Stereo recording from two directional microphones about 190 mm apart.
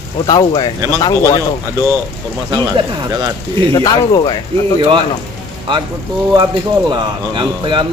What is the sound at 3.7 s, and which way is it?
Speech, 20° left (ahead or behind).